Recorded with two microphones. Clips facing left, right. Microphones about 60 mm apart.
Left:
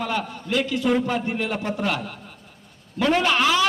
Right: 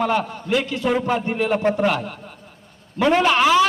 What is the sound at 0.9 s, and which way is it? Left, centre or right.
Speech, centre.